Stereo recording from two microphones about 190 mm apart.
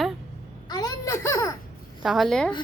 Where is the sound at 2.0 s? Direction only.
Centre (ahead or behind).